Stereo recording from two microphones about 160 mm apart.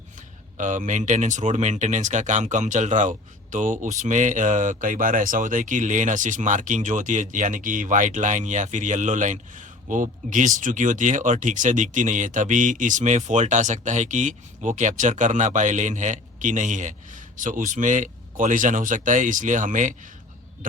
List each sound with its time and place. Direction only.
0.2 s speech: 50° right (ahead or behind)